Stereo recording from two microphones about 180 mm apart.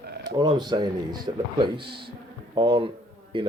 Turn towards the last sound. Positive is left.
turn(degrees=-30)  # may be behind; listen again after turning